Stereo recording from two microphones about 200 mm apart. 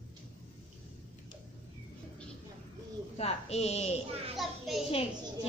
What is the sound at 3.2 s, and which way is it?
Music, 30° left (ahead or behind).